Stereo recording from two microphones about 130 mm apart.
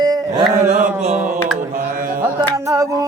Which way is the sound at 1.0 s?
55° right (ahead or behind).